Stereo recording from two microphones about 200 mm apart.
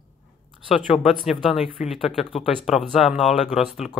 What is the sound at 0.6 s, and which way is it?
Speech, centre (ahead or behind).